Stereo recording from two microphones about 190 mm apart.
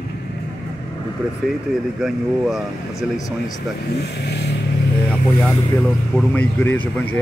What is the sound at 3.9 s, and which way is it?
Speech, 60° left (ahead or behind).